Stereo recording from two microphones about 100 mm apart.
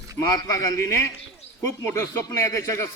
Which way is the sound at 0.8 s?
25° left (ahead or behind).